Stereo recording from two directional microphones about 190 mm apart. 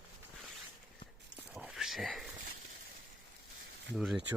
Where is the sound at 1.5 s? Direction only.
5° right (ahead or behind).